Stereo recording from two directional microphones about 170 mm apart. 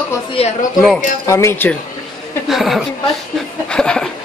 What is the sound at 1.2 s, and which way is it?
Speech, 15° left (ahead or behind).